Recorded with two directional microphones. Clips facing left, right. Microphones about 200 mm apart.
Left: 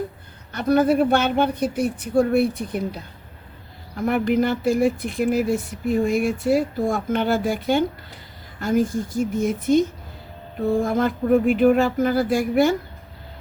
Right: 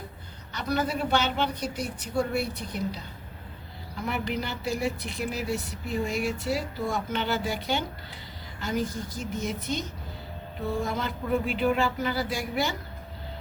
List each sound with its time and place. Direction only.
0.5 s speech: 50° left (ahead or behind)